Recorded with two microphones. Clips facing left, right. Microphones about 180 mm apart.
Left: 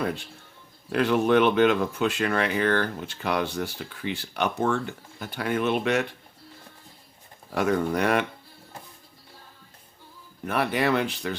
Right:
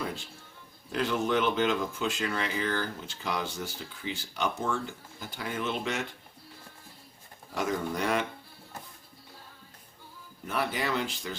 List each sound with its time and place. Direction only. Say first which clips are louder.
0.9 s speech: left 7 dB; 60° left (ahead or behind)
7.5 s speech: left 7 dB; 65° left (ahead or behind)
10.4 s speech: left 7 dB; 65° left (ahead or behind)